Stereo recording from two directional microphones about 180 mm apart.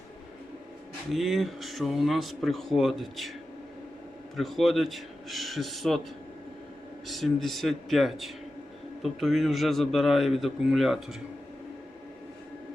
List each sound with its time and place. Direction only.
1.1 s speech: centre (ahead or behind)
4.4 s speech: centre (ahead or behind)
7.1 s speech: centre (ahead or behind)